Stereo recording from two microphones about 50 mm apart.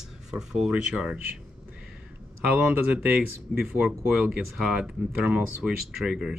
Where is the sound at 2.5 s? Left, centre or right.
Right.